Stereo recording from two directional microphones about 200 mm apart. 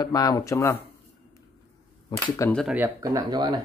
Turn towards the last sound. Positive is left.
turn(degrees=-20)  # may be behind; listen again after turning